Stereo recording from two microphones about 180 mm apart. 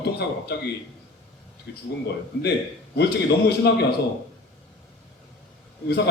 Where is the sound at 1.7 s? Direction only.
70° left (ahead or behind).